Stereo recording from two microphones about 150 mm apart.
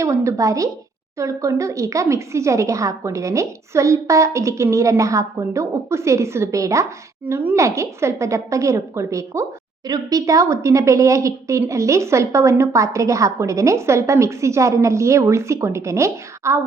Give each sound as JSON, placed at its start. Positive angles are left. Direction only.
{"t": 0.0, "sound": "a woman's voice", "side_deg": -20}